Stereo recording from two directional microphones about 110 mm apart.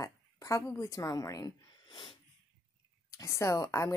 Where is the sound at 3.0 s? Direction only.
30° left (ahead or behind).